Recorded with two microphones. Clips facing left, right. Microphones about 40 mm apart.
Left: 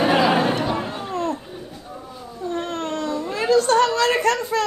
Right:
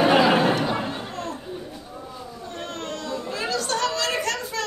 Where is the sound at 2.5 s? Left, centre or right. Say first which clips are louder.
Left 7 dB; left.